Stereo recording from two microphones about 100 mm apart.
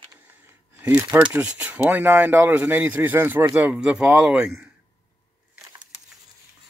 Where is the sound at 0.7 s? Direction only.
20° right (ahead or behind).